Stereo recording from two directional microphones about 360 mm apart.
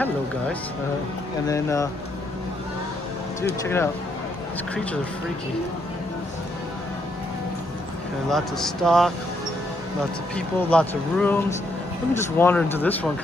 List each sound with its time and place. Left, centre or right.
1.5 s speech: centre
3.6 s speech: centre
8.3 s speech: centre
10.3 s speech: centre